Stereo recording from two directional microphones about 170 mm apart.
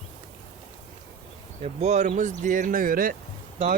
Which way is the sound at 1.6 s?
40° right (ahead or behind).